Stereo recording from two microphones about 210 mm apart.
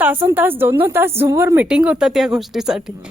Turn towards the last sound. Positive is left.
turn(degrees=0)  # may be behind; listen again after turning